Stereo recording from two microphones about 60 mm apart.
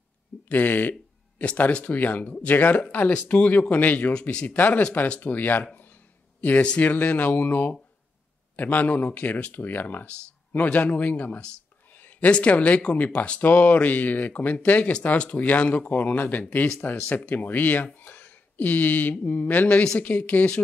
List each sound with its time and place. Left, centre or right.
0.5 s speech: left
1.4 s speech: left
4.1 s speech: centre
4.5 s speech: left